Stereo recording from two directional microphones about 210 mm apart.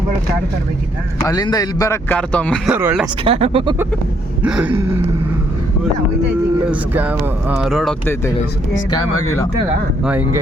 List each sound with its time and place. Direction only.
1.2 s a man's voice: 15° left (ahead or behind)
2.7 s speech: 5° right (ahead or behind)
3.2 s speech: 25° right (ahead or behind)
4.4 s speech: 5° right (ahead or behind)
6.7 s speech: 5° right (ahead or behind)
10.0 s speech: 10° right (ahead or behind)